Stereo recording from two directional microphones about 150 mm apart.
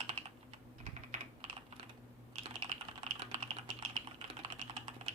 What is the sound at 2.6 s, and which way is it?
Typing, 35° right (ahead or behind).